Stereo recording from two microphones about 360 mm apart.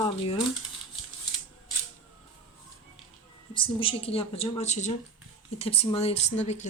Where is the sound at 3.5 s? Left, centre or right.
Centre.